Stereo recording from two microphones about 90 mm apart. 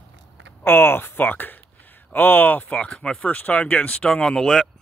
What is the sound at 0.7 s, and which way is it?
Speech, 25° left (ahead or behind).